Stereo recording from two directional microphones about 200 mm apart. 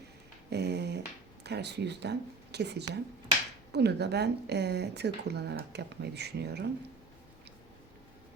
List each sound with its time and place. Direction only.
0.5 s speech: 55° right (ahead or behind)